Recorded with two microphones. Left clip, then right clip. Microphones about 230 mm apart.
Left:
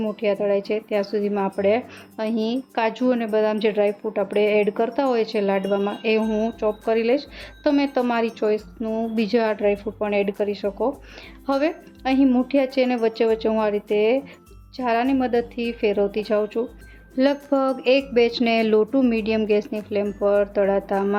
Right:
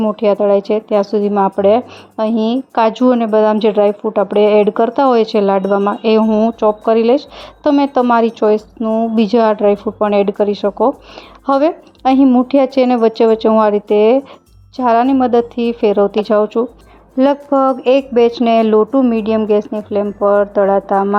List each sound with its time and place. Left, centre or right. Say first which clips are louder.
0.0 s speech: right 10 dB; right
17.2 s speech: right 8 dB; centre